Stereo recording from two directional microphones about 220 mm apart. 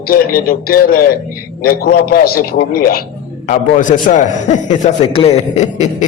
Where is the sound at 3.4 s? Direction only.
35° left (ahead or behind).